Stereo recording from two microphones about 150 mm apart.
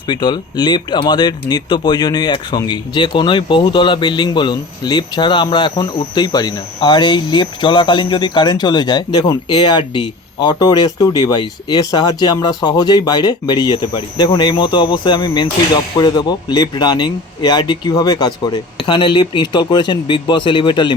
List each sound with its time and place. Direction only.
0.1 s speech: 30° left (ahead or behind)